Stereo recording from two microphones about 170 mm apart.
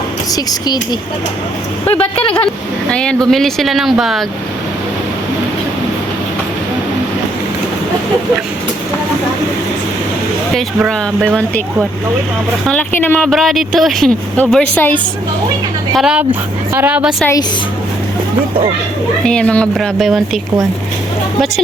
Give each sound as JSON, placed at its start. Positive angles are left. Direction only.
{"t": 2.0, "sound": "speech", "side_deg": 30}
{"t": 2.9, "sound": "speech", "side_deg": 5}
{"t": 10.8, "sound": "speech", "side_deg": -5}
{"t": 12.6, "sound": "speech", "side_deg": 10}
{"t": 16.0, "sound": "a woman's voice", "side_deg": -5}
{"t": 19.2, "sound": "speech", "side_deg": 5}